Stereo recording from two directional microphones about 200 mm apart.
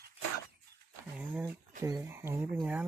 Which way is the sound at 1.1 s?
10° right (ahead or behind).